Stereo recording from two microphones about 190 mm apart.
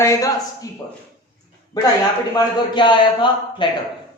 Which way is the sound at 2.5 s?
25° left (ahead or behind).